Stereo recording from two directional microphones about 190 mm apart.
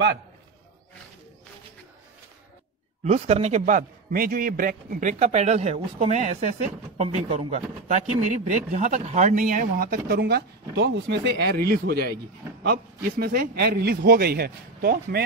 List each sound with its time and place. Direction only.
3.0 s a man's voice: 35° right (ahead or behind); by 15.2 s 50° right (ahead or behind)